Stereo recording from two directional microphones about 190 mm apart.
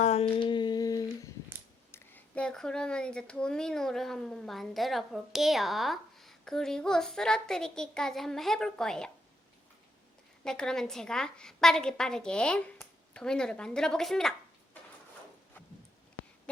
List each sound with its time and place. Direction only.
0.0 s a sound: 35° left (ahead or behind)
0.3 s humming: 25° left (ahead or behind)
1.9 s speech: 10° left (ahead or behind)
10.4 s a woman's voice: 5° left (ahead or behind)